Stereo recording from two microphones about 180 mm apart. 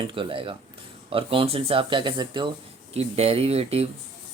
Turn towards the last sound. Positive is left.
turn(degrees=-35)  # may be behind; listen again after turning